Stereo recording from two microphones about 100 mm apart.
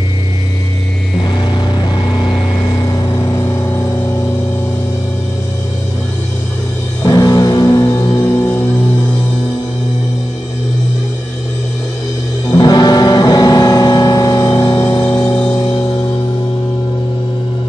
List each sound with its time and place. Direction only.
7.1 s music: 40° left (ahead or behind)
12.4 s music: 45° left (ahead or behind); by 15.2 s 25° left (ahead or behind)